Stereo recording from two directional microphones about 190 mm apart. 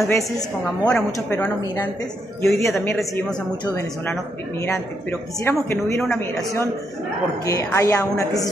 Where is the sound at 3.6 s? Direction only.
15° left (ahead or behind).